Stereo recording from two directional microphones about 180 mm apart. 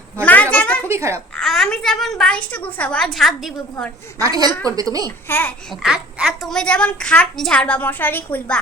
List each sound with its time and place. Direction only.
0.5 s a sound: 5° left (ahead or behind)
0.9 s a child's voice: 15° right (ahead or behind)
1.4 s a woman's voice: 5° left (ahead or behind)
4.2 s a woman's voice: 20° right (ahead or behind)
5.0 s a child's voice: 10° left (ahead or behind)
5.8 s a woman's voice: 5° right (ahead or behind)